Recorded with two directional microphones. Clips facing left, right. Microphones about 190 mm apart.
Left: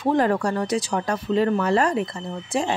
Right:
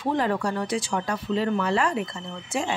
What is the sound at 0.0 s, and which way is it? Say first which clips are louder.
Speech: left 4 dB; 45° left (ahead or behind).